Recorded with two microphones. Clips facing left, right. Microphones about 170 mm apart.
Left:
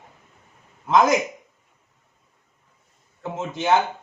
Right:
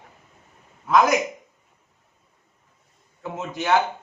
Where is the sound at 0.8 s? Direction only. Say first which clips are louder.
Left 1 dB; 25° left (ahead or behind).